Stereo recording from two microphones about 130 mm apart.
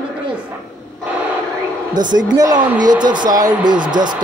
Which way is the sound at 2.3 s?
30° right (ahead or behind).